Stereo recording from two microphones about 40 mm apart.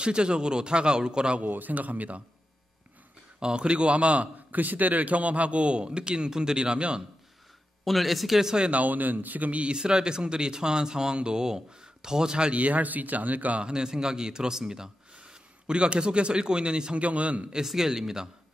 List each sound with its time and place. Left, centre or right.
0.0 s a man's voice: right
1.4 s speech: right
3.3 s a man's voice: right
7.8 s speech: centre
8.5 s a man's voice: right
8.8 s speech: right
9.6 s a man's voice: right
12.5 s speech: right
13.6 s a man's voice: right
17.0 s a man's voice: right
17.6 s a man's voice: centre